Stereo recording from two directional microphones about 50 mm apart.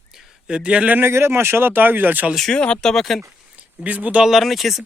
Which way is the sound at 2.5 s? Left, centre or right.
Centre.